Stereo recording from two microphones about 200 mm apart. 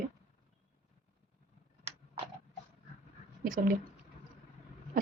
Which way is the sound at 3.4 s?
40° right (ahead or behind).